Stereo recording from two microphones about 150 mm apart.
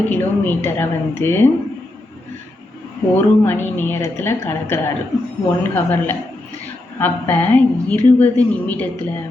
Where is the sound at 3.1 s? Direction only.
15° left (ahead or behind).